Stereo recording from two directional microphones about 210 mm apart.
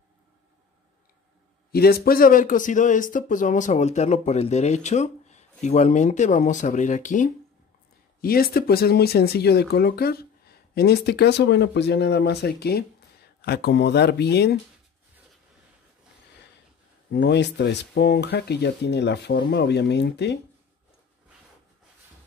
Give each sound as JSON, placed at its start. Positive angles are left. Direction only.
{"t": 1.7, "sound": "speech", "side_deg": 45}
{"t": 17.1, "sound": "speech", "side_deg": 55}